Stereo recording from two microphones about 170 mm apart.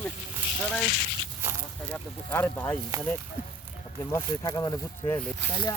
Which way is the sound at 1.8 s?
10° left (ahead or behind).